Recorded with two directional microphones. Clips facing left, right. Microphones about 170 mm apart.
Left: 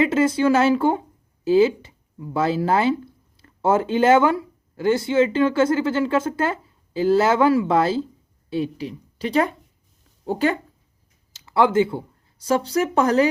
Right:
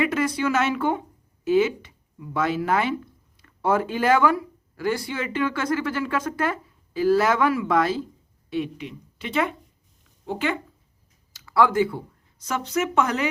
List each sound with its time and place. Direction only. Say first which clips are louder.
0.0 s speech: left 5 dB; 25° left (ahead or behind)
11.3 s speech: left 2 dB; 25° left (ahead or behind)